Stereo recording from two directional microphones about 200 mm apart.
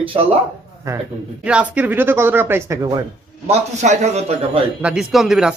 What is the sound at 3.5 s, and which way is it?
Speech, 35° right (ahead or behind).